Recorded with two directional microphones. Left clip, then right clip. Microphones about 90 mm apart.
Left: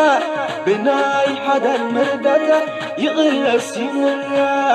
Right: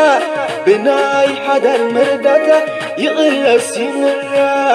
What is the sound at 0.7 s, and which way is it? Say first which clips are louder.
Music: right 5 dB; 25° right (ahead or behind).